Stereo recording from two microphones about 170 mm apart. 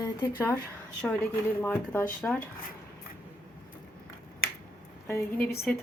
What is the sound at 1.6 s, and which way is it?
Speech, 10° left (ahead or behind).